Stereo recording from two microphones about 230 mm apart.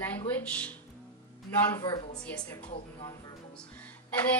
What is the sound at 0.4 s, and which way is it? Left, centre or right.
Speech, centre.